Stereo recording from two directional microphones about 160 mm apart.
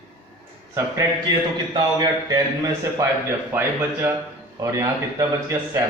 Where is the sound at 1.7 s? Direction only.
25° right (ahead or behind).